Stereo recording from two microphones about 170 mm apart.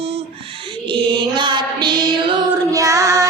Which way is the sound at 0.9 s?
30° right (ahead or behind).